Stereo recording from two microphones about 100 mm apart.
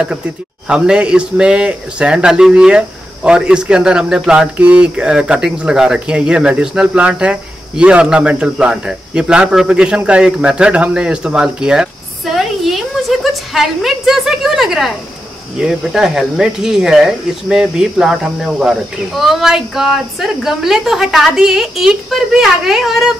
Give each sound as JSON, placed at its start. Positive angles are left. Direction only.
{"t": 0.7, "sound": "speech", "side_deg": -10}